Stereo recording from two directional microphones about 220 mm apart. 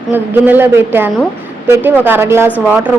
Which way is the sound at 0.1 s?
10° right (ahead or behind).